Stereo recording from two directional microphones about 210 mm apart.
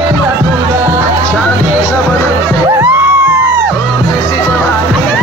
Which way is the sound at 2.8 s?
10° right (ahead or behind).